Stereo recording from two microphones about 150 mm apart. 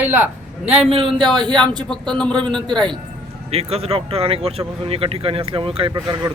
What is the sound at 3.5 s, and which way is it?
Speech, 45° right (ahead or behind).